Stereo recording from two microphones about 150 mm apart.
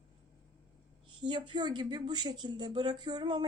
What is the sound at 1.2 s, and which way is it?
Speech, 30° right (ahead or behind).